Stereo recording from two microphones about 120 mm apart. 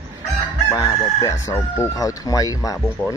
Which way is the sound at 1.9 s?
30° left (ahead or behind).